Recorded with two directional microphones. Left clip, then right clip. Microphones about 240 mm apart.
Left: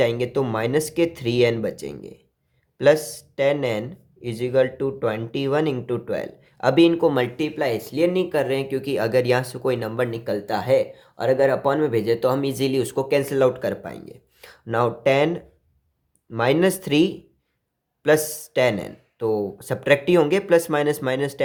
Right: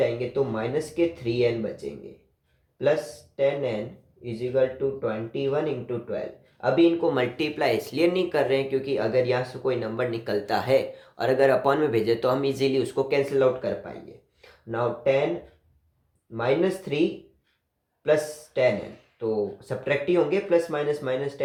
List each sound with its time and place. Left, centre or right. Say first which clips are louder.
0.0 s speech: left 3 dB; left
16.3 s speech: left 4 dB; left
18.0 s speech: left 4 dB; left